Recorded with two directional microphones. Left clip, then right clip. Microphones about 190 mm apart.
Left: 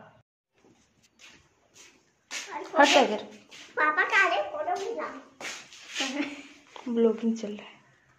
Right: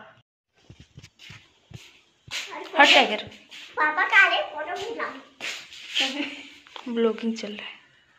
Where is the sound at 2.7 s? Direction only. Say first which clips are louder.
Right 3 dB; 25° left (ahead or behind).